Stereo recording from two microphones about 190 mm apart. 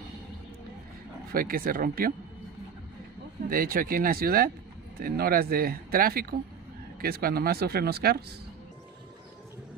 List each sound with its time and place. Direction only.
1.3 s speech: 50° right (ahead or behind)
3.4 s speech: 50° right (ahead or behind)